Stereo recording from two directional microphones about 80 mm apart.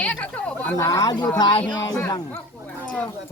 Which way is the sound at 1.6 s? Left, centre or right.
Left.